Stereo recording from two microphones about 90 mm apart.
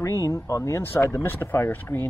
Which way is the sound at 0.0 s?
35° left (ahead or behind).